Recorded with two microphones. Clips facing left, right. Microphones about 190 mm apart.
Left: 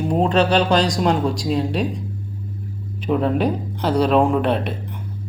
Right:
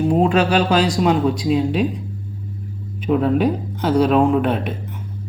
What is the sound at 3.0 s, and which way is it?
Speech, centre (ahead or behind).